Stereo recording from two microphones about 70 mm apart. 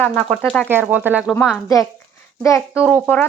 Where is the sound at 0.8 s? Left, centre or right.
Right.